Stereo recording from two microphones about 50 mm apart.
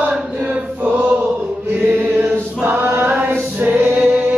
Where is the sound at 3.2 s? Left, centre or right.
Right.